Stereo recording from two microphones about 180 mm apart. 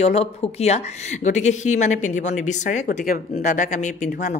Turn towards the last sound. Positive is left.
turn(degrees=40)  # may be behind; listen again after turning